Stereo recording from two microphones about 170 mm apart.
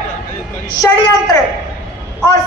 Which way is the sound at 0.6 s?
20° left (ahead or behind).